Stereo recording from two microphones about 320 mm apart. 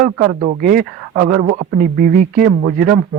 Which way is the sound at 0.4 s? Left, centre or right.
Right.